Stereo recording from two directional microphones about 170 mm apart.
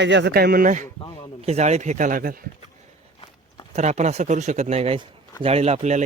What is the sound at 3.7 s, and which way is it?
Speech, 40° right (ahead or behind).